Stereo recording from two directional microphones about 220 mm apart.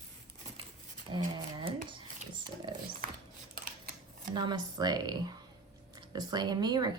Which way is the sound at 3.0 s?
40° right (ahead or behind).